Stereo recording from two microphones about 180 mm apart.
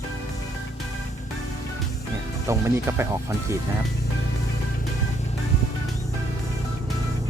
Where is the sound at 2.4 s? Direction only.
15° right (ahead or behind).